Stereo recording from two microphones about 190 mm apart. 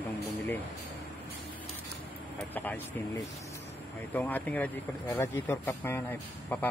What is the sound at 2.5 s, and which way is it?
Speech, 10° left (ahead or behind).